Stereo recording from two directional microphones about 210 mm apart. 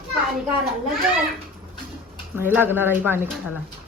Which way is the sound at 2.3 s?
10° right (ahead or behind).